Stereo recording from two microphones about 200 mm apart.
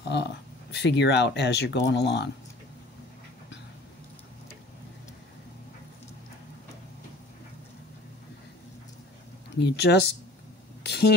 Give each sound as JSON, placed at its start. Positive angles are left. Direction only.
{"t": 0.1, "sound": "speech", "side_deg": 60}
{"t": 9.6, "sound": "speech", "side_deg": 55}
{"t": 10.8, "sound": "a sound", "side_deg": 55}